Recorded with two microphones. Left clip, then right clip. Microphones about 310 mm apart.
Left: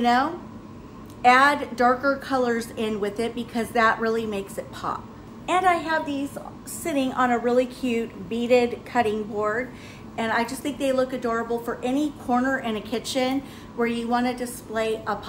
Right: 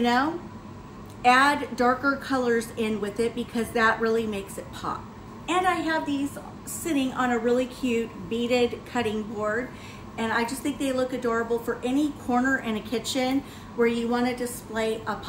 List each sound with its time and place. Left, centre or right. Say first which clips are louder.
0.0 s a woman's voice: left 2 dB; centre
7.8 s speech: even; left
8.5 s a woman's voice: left 5 dB; centre
10.1 s a woman's voice: left 2 dB; centre